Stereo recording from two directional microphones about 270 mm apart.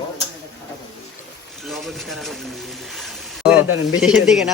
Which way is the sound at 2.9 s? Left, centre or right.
Centre.